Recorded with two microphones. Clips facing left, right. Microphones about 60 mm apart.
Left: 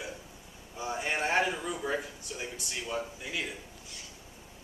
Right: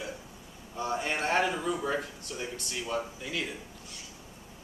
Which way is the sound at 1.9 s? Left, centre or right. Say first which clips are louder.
Right 1 dB; centre.